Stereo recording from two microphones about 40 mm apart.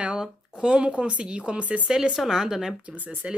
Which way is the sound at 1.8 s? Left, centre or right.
Centre.